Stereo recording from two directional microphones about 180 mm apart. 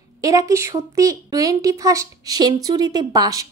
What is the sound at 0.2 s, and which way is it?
A woman's voice, 20° right (ahead or behind).